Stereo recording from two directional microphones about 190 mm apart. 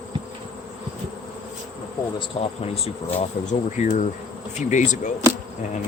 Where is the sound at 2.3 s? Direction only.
25° left (ahead or behind).